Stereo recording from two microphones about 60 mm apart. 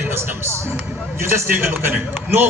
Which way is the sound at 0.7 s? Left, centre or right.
Right.